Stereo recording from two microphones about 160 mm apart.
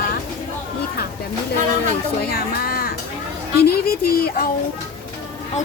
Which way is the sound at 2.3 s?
70° left (ahead or behind).